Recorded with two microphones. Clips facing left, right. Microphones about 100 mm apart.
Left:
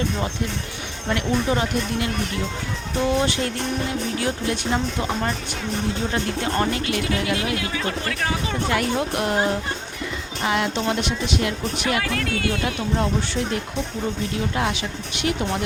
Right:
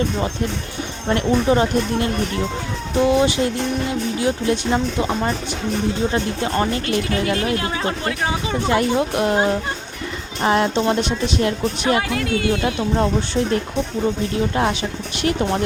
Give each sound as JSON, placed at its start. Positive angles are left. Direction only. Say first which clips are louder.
{"t": 1.1, "sound": "speech", "louder": "right 5 dB", "side_deg": -35}
{"t": 3.1, "sound": "music", "louder": "right 4 dB", "side_deg": -15}
{"t": 4.2, "sound": "speech", "louder": "right 5 dB", "side_deg": -20}
{"t": 6.8, "sound": "speech", "louder": "right 3 dB", "side_deg": -45}
{"t": 10.4, "sound": "speech", "louder": "right 5 dB", "side_deg": -35}
{"t": 12.0, "sound": "speech", "louder": "right 4 dB", "side_deg": -20}
{"t": 14.5, "sound": "speech", "louder": "right 4 dB", "side_deg": -35}